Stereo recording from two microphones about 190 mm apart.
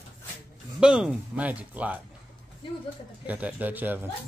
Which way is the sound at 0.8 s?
5° right (ahead or behind).